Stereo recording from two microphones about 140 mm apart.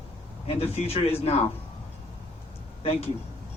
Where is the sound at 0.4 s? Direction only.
45° left (ahead or behind).